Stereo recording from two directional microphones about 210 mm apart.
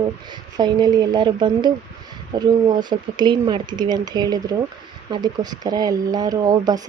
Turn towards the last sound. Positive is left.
turn(degrees=-20)  # may be behind; listen again after turning